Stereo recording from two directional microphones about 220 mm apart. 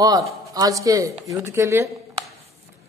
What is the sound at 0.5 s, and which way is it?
A woman's voice, 15° right (ahead or behind).